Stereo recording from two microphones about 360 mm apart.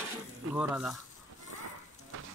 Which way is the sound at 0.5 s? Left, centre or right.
Centre.